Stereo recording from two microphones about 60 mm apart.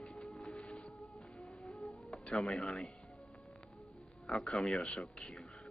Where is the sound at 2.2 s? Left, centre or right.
Centre.